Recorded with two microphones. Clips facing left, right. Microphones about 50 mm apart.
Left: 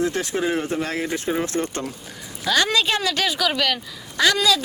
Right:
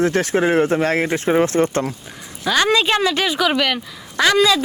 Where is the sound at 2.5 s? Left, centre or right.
Right.